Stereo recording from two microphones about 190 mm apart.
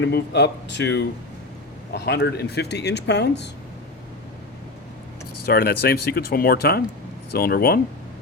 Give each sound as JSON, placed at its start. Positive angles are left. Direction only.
{"t": 0.0, "sound": "speech", "side_deg": 65}
{"t": 5.5, "sound": "speech", "side_deg": 55}